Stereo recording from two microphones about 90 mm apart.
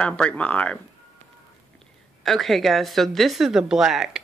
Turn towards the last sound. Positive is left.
turn(degrees=-5)  # may be behind; listen again after turning